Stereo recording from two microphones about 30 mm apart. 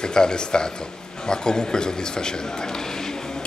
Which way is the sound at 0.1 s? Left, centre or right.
Left.